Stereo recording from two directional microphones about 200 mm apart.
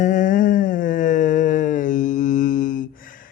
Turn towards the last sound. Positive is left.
turn(degrees=45)  # may be behind; listen again after turning